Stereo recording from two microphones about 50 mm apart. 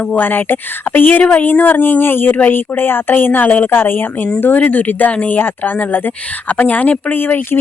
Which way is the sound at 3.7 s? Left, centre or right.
Left.